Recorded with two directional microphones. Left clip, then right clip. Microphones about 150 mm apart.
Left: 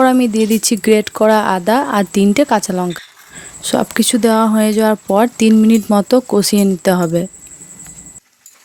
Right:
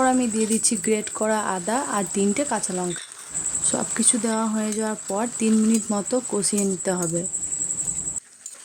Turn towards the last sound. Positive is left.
turn(degrees=75)  # may be behind; listen again after turning